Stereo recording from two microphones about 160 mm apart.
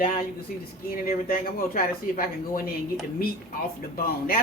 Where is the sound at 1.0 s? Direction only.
65° left (ahead or behind).